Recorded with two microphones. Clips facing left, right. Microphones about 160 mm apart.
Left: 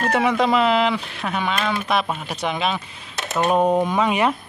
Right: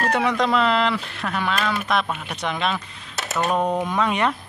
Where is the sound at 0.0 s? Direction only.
5° left (ahead or behind).